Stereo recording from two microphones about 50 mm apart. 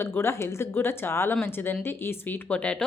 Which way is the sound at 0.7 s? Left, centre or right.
Left.